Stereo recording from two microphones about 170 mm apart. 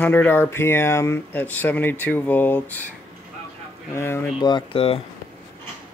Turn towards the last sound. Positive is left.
turn(degrees=35)  # may be behind; listen again after turning